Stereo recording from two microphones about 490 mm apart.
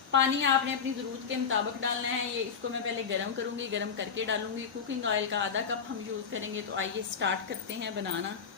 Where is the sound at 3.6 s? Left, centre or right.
Right.